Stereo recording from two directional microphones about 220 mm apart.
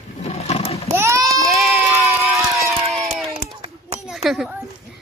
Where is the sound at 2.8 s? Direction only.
Centre (ahead or behind).